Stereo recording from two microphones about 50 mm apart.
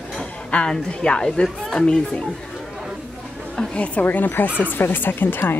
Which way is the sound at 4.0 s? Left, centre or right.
Left.